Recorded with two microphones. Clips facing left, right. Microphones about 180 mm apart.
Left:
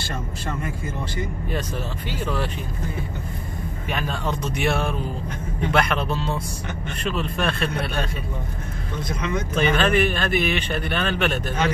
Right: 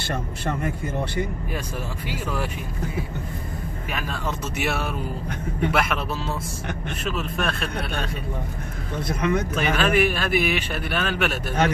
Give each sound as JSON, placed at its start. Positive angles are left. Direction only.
{"t": 0.1, "sound": "a man's voice", "side_deg": -55}
{"t": 2.0, "sound": "speech", "side_deg": -10}
{"t": 3.9, "sound": "speech", "side_deg": 0}
{"t": 9.0, "sound": "a man's voice", "side_deg": -55}
{"t": 9.6, "sound": "speech", "side_deg": -5}